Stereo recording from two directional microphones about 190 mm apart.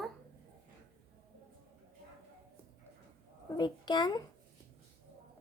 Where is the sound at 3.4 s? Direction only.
20° left (ahead or behind).